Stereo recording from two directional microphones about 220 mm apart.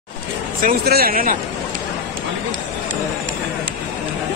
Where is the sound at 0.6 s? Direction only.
40° right (ahead or behind).